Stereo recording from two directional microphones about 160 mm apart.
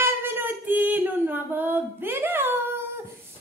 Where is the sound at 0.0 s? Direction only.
15° right (ahead or behind).